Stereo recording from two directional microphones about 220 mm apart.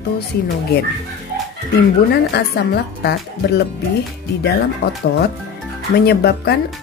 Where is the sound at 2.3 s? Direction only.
50° left (ahead or behind).